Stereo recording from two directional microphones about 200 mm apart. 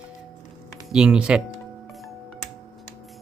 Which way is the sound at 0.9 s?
5° right (ahead or behind).